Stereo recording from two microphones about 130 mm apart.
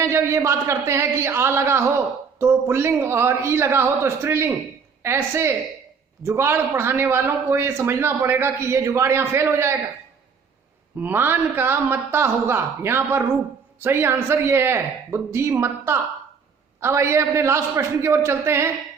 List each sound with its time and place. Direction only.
0.0 s a man's voice: 20° right (ahead or behind)
11.0 s a man's voice: 15° right (ahead or behind)